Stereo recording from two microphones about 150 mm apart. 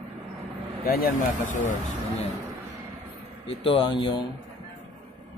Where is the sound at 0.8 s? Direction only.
80° left.